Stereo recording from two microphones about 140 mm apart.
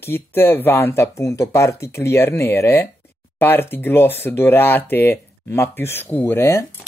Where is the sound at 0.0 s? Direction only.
15° left (ahead or behind).